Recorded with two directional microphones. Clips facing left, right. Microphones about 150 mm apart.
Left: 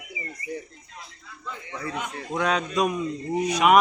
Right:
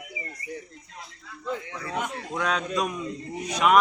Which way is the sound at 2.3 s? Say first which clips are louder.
Left 3 dB; 5° left (ahead or behind).